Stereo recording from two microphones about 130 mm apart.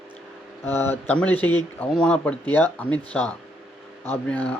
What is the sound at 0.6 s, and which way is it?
Speech, 15° left (ahead or behind).